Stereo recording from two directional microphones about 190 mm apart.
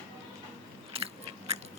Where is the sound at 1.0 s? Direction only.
30° right (ahead or behind).